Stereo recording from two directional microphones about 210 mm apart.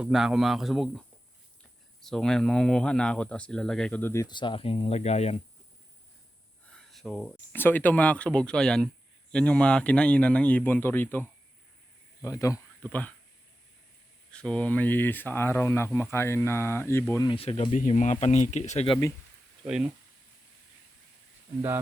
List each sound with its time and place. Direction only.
0.0 s speech: centre (ahead or behind); by 5.4 s 30° left (ahead or behind)
6.7 s speech: 5° left (ahead or behind)
14.3 s speech: 5° left (ahead or behind)
17.3 s speech: 25° left (ahead or behind)
19.6 s speech: 5° right (ahead or behind)